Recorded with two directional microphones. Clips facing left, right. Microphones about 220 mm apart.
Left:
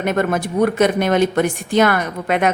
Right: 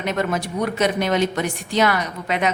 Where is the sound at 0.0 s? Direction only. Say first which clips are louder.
Left 4 dB; 50° left (ahead or behind).